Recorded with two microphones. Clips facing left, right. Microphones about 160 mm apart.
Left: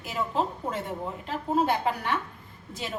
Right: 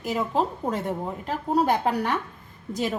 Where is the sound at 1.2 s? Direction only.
45° right (ahead or behind).